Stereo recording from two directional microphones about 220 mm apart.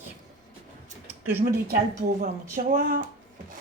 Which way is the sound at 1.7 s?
45° right (ahead or behind).